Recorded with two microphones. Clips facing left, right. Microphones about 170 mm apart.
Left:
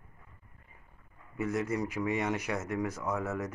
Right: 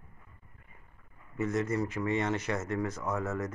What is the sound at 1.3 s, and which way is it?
Speech, 10° left (ahead or behind).